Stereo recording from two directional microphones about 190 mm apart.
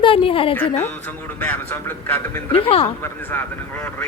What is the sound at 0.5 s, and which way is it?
Speech, 10° left (ahead or behind).